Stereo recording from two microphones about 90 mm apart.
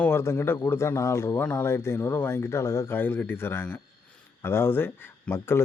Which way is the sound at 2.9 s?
20° left (ahead or behind).